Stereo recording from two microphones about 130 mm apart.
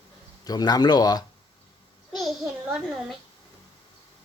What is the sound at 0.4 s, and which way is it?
Speech, 30° left (ahead or behind).